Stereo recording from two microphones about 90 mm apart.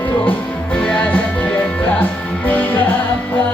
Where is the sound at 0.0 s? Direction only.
15° left (ahead or behind).